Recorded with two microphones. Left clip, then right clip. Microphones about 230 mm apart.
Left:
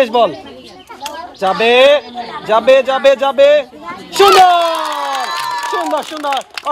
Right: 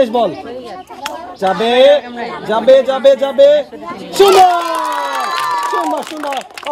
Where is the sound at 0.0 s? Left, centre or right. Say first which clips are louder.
Left 1 dB; left.